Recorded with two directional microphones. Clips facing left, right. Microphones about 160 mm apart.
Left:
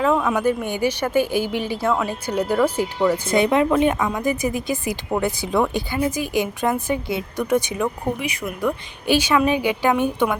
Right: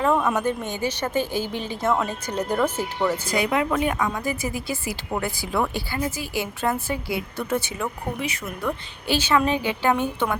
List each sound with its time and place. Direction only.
0.1 s speech: 5° right (ahead or behind)
0.3 s a woman's voice: 10° left (ahead or behind)
3.2 s a woman's voice: 25° left (ahead or behind)